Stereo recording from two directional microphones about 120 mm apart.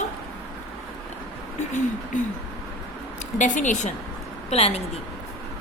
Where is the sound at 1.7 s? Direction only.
90° left.